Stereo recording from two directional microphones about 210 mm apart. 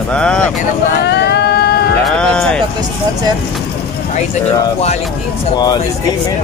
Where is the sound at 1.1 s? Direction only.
50° left (ahead or behind).